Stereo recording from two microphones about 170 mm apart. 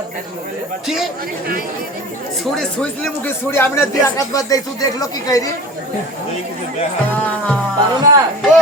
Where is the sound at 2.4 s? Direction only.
5° left (ahead or behind); by 5.5 s 20° left (ahead or behind).